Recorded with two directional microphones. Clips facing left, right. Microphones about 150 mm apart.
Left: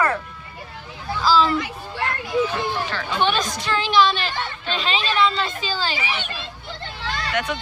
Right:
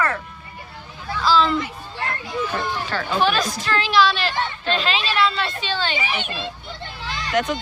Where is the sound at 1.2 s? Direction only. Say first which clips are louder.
Even; 5° left (ahead or behind).